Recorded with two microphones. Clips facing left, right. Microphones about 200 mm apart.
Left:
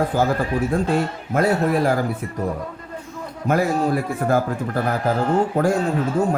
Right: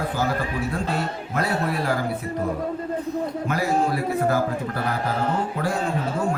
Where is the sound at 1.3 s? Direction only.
45° left (ahead or behind).